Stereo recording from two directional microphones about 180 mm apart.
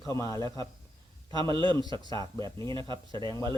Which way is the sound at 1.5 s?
25° right (ahead or behind).